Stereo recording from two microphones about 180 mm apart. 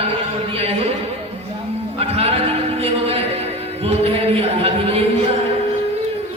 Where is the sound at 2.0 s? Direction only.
35° right (ahead or behind).